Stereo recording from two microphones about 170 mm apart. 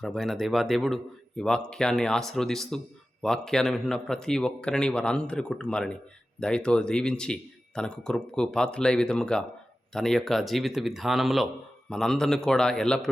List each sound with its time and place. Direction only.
0.0 s speech: centre (ahead or behind)